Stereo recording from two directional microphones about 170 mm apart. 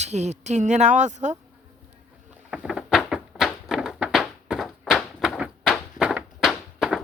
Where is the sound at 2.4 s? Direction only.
5° right (ahead or behind).